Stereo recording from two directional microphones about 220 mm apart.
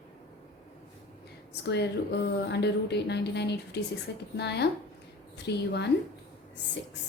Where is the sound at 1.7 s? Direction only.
50° left (ahead or behind).